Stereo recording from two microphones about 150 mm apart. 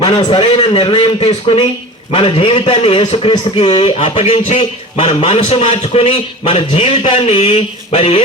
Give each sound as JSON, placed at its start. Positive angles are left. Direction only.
{"t": 0.0, "sound": "a man's voice", "side_deg": 30}
{"t": 7.3, "sound": "mantra", "side_deg": 45}